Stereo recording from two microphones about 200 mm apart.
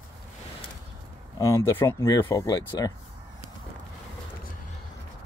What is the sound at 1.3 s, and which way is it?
Speech, 15° left (ahead or behind).